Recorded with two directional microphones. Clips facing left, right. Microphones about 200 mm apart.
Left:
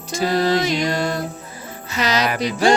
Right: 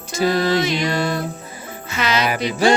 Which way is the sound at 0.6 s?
40° left (ahead or behind).